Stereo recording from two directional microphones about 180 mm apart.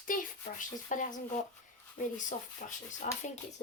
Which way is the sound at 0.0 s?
50° left (ahead or behind).